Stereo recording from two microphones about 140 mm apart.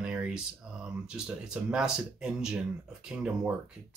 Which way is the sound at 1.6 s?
5° right (ahead or behind).